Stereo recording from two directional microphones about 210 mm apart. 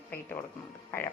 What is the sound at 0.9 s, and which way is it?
Speech, 10° left (ahead or behind).